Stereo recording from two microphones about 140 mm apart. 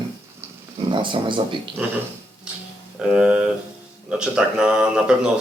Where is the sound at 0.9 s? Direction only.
35° right (ahead or behind).